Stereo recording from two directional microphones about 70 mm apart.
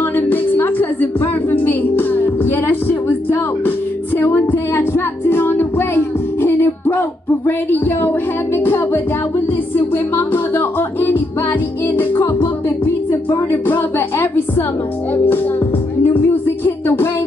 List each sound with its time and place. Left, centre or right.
0.0 s music: left
10.1 s music: left
13.7 s a sound: left
16.0 s music: left